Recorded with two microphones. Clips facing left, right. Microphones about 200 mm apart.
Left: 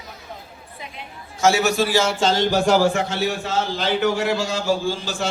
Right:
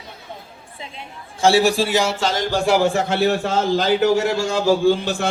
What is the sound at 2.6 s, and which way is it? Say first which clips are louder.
Speech: right 1 dB; 15° right (ahead or behind).